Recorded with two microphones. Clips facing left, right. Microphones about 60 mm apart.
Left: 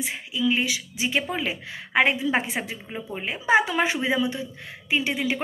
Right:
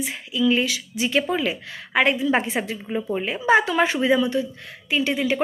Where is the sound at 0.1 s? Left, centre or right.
Centre.